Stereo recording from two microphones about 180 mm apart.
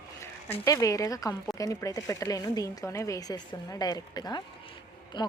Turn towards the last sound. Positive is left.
turn(degrees=25)  # may be behind; listen again after turning